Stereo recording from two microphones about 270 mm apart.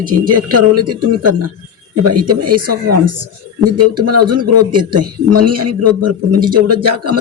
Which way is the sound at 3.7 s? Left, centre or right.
Right.